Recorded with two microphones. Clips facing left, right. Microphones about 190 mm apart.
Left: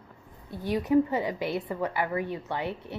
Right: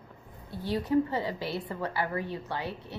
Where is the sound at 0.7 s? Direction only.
15° left (ahead or behind).